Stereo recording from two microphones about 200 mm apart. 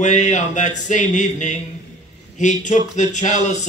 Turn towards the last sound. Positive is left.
turn(degrees=35)  # may be behind; listen again after turning